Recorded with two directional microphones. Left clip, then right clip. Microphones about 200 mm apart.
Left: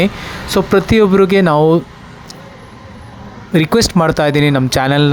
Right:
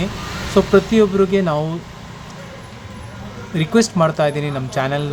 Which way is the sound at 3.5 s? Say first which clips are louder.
Left 5 dB; 45° left (ahead or behind).